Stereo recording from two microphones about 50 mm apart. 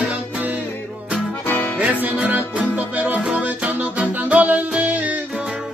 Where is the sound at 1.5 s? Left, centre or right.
Left.